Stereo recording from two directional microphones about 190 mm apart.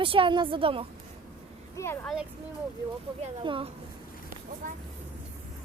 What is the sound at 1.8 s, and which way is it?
Speech, 15° left (ahead or behind).